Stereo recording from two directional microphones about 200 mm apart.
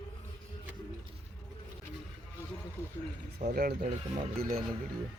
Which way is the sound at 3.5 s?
50° right (ahead or behind).